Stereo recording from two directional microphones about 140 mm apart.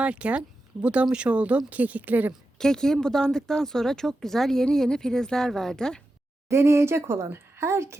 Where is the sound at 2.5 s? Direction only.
5° left (ahead or behind).